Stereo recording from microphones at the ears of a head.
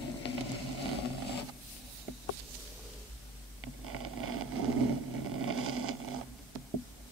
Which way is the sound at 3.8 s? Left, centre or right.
Right.